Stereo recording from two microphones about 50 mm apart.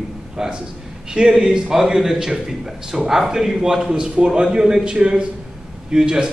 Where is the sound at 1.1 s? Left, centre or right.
Centre.